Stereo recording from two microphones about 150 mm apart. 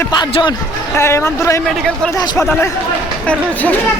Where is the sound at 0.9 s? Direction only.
15° left (ahead or behind).